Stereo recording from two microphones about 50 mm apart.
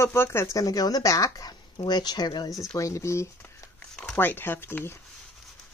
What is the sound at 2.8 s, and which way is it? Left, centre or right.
Speech, left.